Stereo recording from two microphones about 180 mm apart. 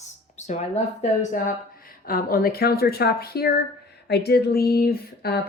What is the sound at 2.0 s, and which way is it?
Speech, 55° left (ahead or behind).